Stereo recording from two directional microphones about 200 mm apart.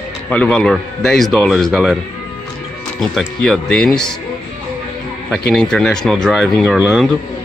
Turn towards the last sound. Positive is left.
turn(degrees=-5)  # may be behind; listen again after turning